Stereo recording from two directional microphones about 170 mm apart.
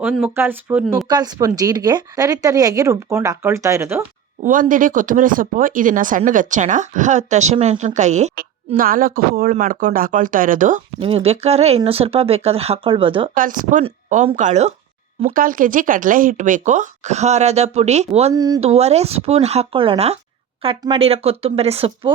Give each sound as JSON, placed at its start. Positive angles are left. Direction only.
{"t": 0.0, "sound": "speech", "side_deg": -5}
{"t": 1.0, "sound": "speech", "side_deg": -25}
{"t": 4.4, "sound": "speech", "side_deg": -50}
{"t": 8.4, "sound": "speech", "side_deg": -55}
{"t": 11.0, "sound": "speech", "side_deg": -35}
{"t": 13.3, "sound": "speech", "side_deg": -50}
{"t": 18.3, "sound": "speech", "side_deg": -20}
{"t": 18.6, "sound": "speech", "side_deg": -40}